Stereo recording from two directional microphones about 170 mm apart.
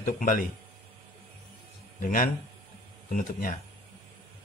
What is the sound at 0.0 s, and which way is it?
Speech, 55° left (ahead or behind).